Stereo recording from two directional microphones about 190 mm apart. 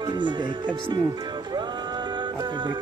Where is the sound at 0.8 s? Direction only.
25° right (ahead or behind).